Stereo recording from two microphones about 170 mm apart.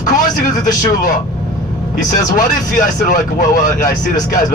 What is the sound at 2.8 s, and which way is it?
Speech, 55° left (ahead or behind).